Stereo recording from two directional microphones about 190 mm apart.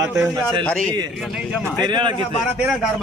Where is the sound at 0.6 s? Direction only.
5° left (ahead or behind).